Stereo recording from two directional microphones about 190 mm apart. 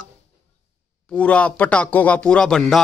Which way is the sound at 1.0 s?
5° left (ahead or behind).